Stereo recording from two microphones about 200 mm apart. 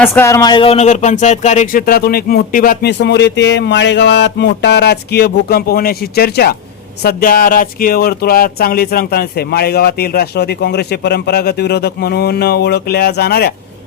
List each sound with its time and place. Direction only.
0.0 s speech: 15° left (ahead or behind); by 13.5 s 50° left (ahead or behind)